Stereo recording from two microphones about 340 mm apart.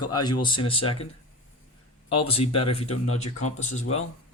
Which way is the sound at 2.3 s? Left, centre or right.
Centre.